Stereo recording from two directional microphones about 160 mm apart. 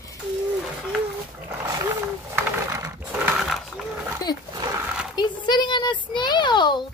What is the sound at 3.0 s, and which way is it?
Horse, 10° right (ahead or behind).